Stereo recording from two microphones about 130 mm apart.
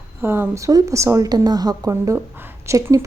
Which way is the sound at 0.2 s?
20° right (ahead or behind).